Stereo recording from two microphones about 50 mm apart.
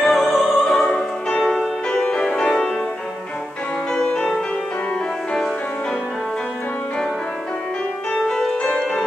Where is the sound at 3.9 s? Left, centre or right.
Centre.